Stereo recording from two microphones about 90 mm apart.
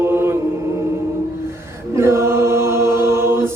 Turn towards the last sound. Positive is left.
turn(degrees=-30)  # may be behind; listen again after turning